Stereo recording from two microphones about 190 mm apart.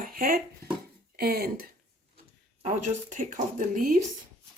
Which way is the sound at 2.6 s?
40° right (ahead or behind).